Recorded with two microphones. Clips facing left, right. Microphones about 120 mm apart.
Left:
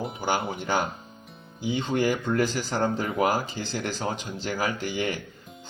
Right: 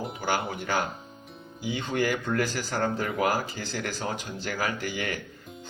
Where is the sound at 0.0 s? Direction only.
Centre (ahead or behind).